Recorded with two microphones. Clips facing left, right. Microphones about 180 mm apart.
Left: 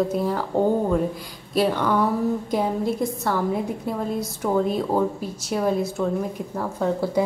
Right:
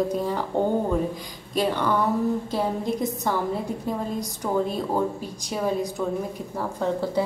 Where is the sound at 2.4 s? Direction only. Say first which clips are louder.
Left 3 dB; 15° left (ahead or behind).